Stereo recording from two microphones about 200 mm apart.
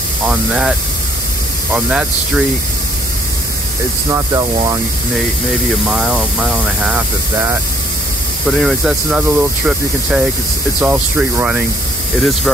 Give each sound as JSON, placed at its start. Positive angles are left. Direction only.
{"t": 0.3, "sound": "speech", "side_deg": -5}
{"t": 4.1, "sound": "speech", "side_deg": -15}
{"t": 5.9, "sound": "speech", "side_deg": -5}